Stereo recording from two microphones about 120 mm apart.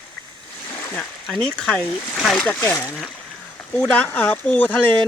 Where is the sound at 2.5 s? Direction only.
20° left (ahead or behind).